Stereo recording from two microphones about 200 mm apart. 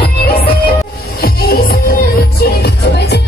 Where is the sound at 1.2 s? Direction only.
50° left (ahead or behind).